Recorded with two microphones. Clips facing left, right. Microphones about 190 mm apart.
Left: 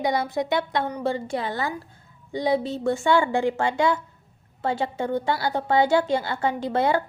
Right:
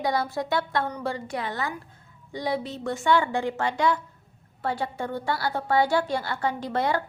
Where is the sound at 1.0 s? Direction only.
25° left (ahead or behind).